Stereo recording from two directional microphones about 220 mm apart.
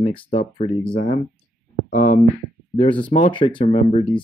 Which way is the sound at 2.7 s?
25° left (ahead or behind).